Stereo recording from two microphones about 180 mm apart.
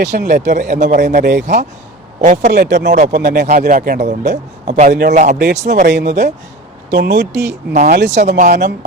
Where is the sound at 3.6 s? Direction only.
55° right (ahead or behind).